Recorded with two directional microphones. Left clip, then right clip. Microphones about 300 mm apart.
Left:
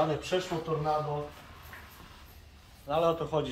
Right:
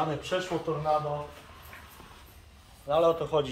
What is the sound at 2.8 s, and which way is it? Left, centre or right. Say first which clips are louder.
Speech: right 3 dB; right.